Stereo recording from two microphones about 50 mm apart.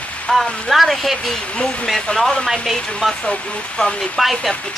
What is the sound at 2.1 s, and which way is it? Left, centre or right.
Speech, left.